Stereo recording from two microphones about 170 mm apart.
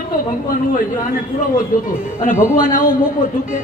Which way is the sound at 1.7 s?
50° left (ahead or behind).